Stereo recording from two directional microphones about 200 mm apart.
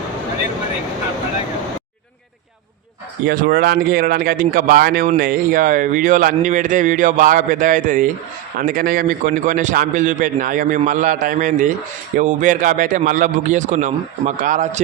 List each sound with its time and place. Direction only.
3.2 s a man's voice: 45° right (ahead or behind)